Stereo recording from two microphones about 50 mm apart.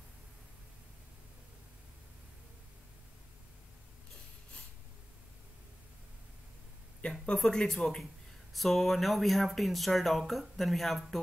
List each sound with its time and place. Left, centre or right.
7.0 s speech: left
7.3 s speech: centre